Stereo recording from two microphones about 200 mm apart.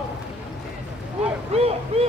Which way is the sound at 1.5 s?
30° right (ahead or behind).